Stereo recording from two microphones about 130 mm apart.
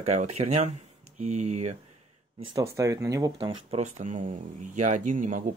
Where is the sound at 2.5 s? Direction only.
25° right (ahead or behind).